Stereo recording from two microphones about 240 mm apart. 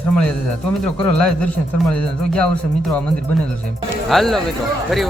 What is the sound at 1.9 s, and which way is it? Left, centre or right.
Speech, centre.